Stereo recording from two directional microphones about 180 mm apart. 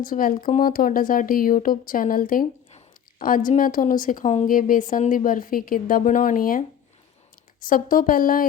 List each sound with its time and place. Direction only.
0.0 s a woman's voice: 50° left (ahead or behind)